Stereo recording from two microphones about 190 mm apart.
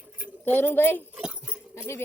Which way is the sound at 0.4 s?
10° left (ahead or behind).